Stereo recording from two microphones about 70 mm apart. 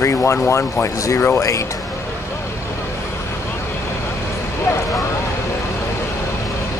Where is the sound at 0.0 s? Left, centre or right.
Left.